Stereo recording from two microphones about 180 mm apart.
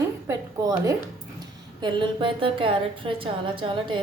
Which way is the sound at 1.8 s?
25° right (ahead or behind).